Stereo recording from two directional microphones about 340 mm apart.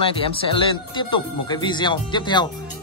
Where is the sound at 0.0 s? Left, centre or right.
Centre.